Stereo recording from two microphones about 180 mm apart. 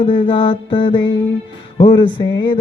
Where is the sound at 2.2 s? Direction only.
25° left (ahead or behind).